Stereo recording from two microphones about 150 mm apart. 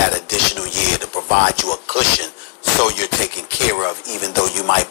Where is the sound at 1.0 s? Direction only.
90° left.